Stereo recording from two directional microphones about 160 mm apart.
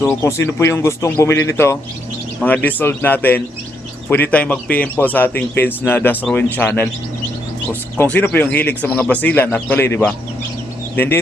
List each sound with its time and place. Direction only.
0.0 s a man's voice: 15° left (ahead or behind)